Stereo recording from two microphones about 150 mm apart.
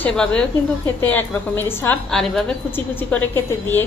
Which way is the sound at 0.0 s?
5° left (ahead or behind).